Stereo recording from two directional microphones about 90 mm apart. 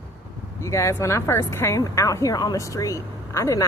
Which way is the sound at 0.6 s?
35° left (ahead or behind).